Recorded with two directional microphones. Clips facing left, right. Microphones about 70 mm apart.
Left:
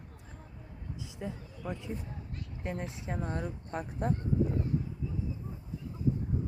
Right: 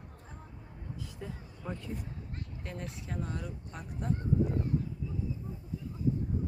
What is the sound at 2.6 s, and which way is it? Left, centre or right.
Speech, left.